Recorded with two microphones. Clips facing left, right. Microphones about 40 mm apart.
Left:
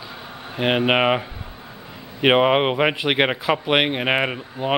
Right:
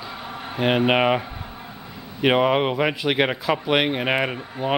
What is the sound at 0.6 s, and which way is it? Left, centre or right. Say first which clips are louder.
Speech: even; centre.